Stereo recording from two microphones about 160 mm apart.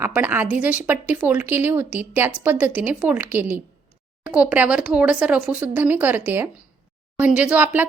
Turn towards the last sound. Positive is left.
turn(degrees=-10)  # may be behind; listen again after turning